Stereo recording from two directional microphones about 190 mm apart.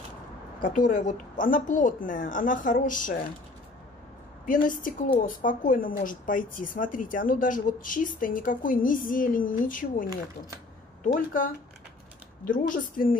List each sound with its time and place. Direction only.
0.6 s speech: 45° left (ahead or behind)
4.5 s speech: 45° left (ahead or behind)